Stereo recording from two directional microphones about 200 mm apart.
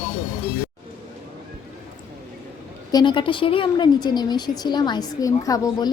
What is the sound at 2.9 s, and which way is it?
A woman's voice, 25° left (ahead or behind).